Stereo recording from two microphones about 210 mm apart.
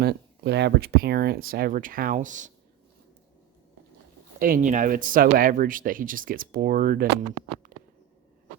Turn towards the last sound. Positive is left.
turn(degrees=-40)  # may be behind; listen again after turning